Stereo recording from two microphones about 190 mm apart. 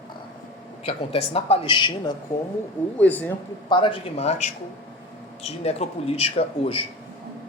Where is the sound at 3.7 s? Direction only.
25° left (ahead or behind).